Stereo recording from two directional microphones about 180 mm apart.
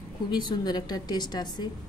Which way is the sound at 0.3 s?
25° left (ahead or behind).